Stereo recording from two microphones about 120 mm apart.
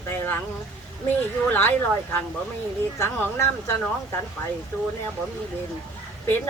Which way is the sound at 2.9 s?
20° left (ahead or behind).